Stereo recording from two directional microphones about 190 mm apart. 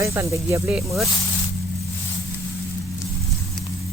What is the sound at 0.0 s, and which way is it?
Speech, 15° right (ahead or behind).